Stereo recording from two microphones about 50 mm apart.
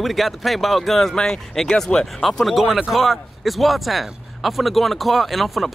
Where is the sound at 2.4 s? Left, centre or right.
Centre.